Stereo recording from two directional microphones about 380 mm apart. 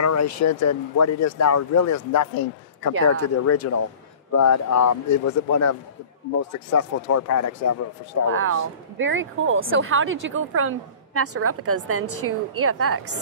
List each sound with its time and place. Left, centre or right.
0.0 s speech: left
3.2 s speech: left
8.3 s speech: right